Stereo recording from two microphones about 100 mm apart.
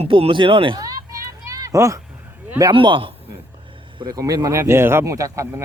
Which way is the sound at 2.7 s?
60° right (ahead or behind).